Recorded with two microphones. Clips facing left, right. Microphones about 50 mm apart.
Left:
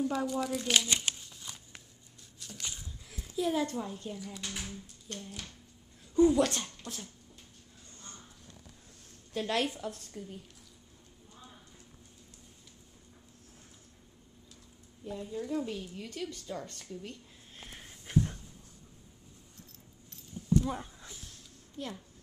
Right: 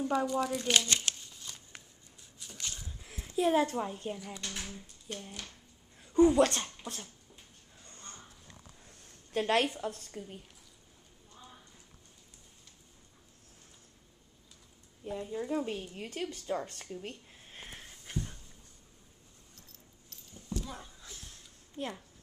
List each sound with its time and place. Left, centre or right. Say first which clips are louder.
0.0 s shuffling cards: right 1 dB; centre
2.4 s a sound: left 2 dB; centre
3.2 s a child's voice: right 4 dB; right
4.4 s speech: even; centre
4.7 s speech: right 1 dB; centre
6.6 s speech: right 1 dB; centre
9.3 s a woman's voice: right 3 dB; right
15.0 s a woman's voice: right 1 dB; right
17.7 s a sound: left 10 dB; centre
20.5 s a sound: left 11 dB; left
21.7 s speech: right 2 dB; right